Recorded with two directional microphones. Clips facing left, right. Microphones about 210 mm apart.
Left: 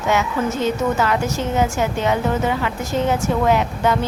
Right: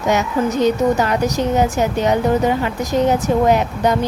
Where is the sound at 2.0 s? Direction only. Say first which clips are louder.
Right 5 dB; 40° right (ahead or behind).